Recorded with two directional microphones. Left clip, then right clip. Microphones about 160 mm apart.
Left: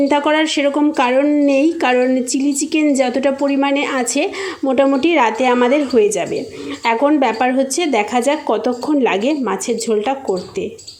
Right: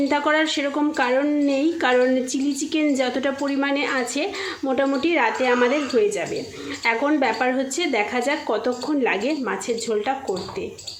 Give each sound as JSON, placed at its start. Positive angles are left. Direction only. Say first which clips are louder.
{"t": 0.1, "sound": "a woman's voice", "louder": "left 5 dB", "side_deg": 30}